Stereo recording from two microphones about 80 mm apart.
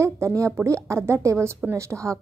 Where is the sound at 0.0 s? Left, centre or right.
Right.